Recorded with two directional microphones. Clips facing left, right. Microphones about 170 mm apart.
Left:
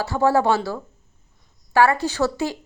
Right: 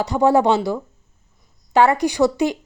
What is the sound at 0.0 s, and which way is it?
A woman's voice, 20° right (ahead or behind).